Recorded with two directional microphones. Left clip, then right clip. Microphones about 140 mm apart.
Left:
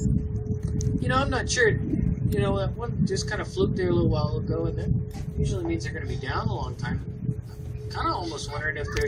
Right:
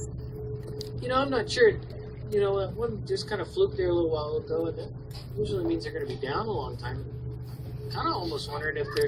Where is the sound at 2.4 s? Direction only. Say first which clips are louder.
Right 2 dB; 60° left (ahead or behind).